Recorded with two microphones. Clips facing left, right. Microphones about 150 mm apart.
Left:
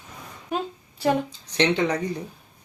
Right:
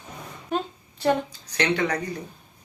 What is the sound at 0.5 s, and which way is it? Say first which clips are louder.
Speech: right 1 dB; 5° left (ahead or behind).